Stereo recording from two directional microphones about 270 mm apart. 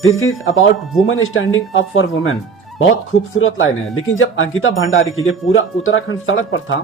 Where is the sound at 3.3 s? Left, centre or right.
Left.